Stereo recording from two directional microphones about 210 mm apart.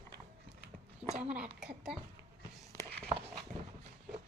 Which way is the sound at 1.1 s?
30° right (ahead or behind).